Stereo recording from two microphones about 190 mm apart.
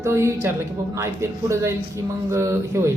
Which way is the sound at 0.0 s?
15° right (ahead or behind).